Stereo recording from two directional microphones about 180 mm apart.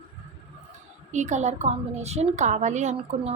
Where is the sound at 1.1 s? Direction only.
40° right (ahead or behind).